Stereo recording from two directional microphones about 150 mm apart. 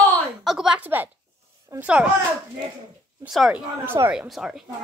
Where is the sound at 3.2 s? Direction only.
Centre (ahead or behind).